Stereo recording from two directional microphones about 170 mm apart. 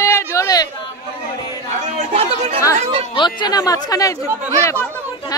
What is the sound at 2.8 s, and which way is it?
Speech, 35° right (ahead or behind).